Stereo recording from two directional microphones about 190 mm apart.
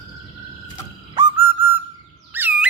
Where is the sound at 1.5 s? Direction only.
10° right (ahead or behind).